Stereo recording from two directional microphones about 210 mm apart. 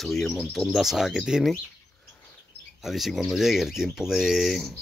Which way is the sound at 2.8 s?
Centre (ahead or behind).